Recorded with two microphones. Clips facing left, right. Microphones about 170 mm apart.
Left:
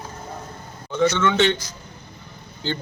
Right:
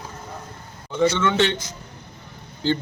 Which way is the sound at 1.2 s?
5° right (ahead or behind).